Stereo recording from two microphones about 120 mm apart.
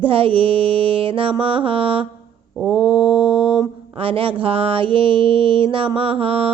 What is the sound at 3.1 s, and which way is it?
Mantra, 45° right (ahead or behind).